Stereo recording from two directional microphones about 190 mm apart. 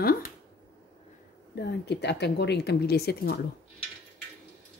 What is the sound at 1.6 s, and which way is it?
Speech, 65° left (ahead or behind).